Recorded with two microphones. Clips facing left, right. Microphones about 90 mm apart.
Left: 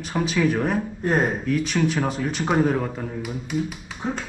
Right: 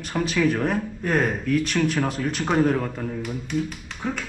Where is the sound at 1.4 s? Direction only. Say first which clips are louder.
Even; centre (ahead or behind).